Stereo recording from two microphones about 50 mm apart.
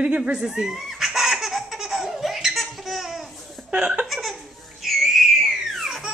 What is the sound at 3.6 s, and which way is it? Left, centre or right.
Laughter, right.